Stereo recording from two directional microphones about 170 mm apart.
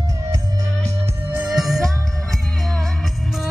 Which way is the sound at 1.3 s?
5° right (ahead or behind).